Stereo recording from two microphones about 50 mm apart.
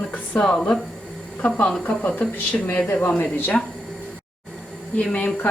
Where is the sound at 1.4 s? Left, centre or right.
Left.